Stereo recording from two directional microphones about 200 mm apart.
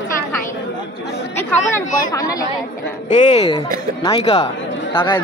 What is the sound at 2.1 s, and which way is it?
Chatter, 15° left (ahead or behind).